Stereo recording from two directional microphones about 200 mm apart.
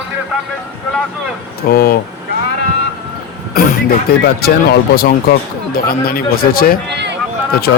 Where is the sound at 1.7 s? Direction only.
50° left (ahead or behind).